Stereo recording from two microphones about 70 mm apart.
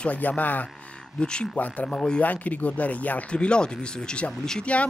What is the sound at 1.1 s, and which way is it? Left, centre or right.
Speech, centre.